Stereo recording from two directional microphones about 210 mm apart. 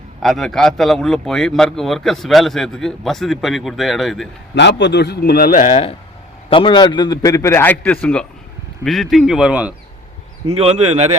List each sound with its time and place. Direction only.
0.2 s a man's voice: centre (ahead or behind)
4.5 s a man's voice: 55° left (ahead or behind); by 5.9 s 35° left (ahead or behind)
6.5 s a man's voice: 25° left (ahead or behind); by 9.7 s 5° right (ahead or behind)
10.6 s speech: 30° right (ahead or behind)